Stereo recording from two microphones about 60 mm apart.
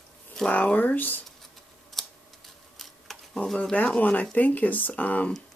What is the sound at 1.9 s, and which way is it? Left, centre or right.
Typing, centre.